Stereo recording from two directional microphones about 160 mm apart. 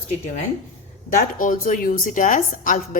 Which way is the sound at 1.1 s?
55° left (ahead or behind).